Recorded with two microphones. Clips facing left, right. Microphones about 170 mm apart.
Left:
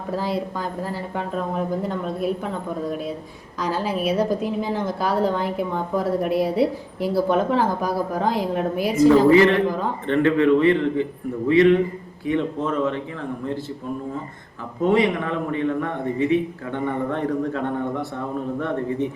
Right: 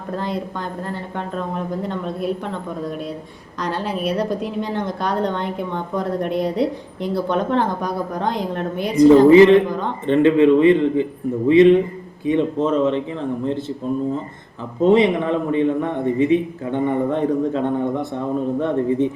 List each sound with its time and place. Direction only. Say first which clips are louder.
0.1 s a woman's voice: even; 5° left (ahead or behind)
3.6 s a woman's voice: even; 5° left (ahead or behind)
9.0 s a man's voice: right 5 dB; 20° right (ahead or behind)
14.8 s a man's voice: right 4 dB; 25° right (ahead or behind)